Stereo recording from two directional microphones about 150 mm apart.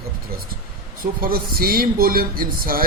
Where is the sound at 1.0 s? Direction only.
80° right.